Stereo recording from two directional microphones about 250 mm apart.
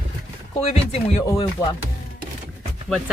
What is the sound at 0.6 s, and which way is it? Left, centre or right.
Speech, left.